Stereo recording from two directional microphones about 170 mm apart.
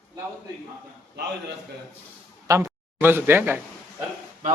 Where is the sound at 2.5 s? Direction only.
15° right (ahead or behind).